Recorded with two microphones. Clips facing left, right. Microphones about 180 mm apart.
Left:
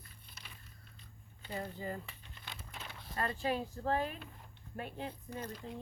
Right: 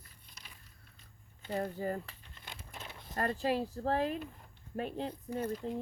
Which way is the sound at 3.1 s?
45° right (ahead or behind).